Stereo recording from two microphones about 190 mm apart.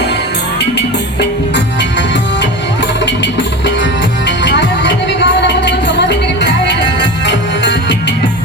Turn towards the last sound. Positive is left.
turn(degrees=65)  # may be behind; listen again after turning